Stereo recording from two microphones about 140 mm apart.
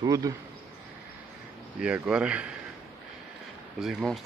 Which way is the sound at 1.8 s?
5° right (ahead or behind).